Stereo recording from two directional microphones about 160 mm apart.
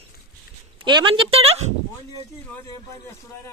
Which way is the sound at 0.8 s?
30° right (ahead or behind).